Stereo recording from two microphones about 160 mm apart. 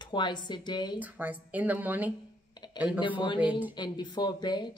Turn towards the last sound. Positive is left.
turn(degrees=25)  # may be behind; listen again after turning